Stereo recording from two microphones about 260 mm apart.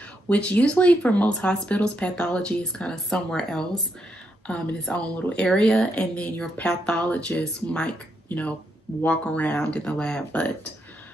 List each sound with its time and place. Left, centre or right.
0.3 s a woman's voice: centre